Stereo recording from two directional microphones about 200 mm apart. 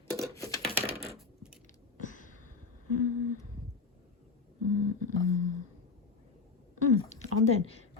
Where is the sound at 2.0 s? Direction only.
40° left (ahead or behind).